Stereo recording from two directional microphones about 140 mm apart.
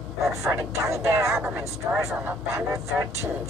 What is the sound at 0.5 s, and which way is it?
Speech, 20° right (ahead or behind).